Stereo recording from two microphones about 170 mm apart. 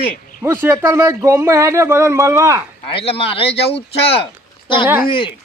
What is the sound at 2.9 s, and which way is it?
Speech, 35° left (ahead or behind).